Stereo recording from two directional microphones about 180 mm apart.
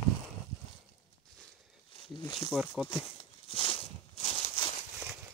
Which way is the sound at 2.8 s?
30° left (ahead or behind).